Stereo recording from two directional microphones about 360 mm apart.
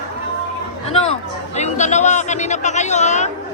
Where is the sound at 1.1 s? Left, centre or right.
Centre.